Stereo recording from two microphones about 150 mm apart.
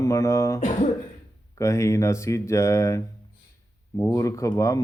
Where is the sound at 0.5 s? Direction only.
45° left (ahead or behind).